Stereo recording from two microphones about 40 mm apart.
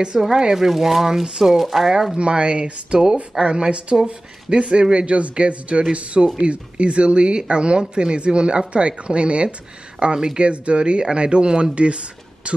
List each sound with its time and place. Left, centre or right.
0.2 s speech: centre
2.1 s speech: right